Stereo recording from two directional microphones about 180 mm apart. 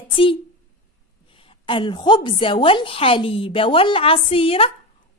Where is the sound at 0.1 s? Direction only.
30° left (ahead or behind).